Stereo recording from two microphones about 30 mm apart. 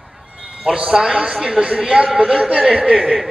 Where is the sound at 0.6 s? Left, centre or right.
Right.